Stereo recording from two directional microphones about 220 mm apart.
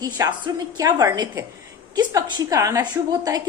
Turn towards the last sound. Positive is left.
turn(degrees=-15)  # may be behind; listen again after turning